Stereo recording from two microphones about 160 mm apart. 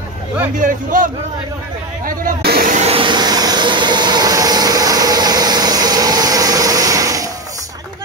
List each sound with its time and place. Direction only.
0.6 s a man's voice: 55° right (ahead or behind)
2.0 s speech: 70° right (ahead or behind)
2.7 s vehicle: 40° right (ahead or behind); by 7.2 s 20° right (ahead or behind)